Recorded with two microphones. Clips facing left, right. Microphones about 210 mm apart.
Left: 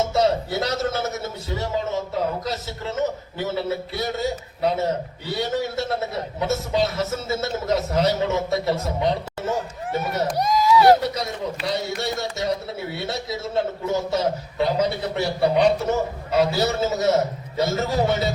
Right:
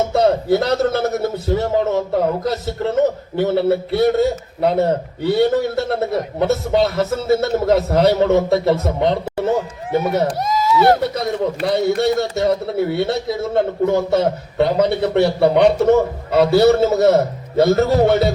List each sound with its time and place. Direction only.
0.1 s a man's voice: 55° right (ahead or behind)
10.4 s a sound: centre (ahead or behind)
11.1 s a man's voice: 55° right (ahead or behind)